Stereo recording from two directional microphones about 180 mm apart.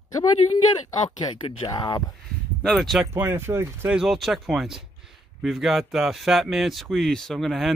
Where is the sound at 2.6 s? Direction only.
Centre (ahead or behind).